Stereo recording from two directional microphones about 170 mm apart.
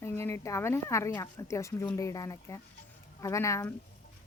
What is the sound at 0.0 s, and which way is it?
Speech, 15° left (ahead or behind).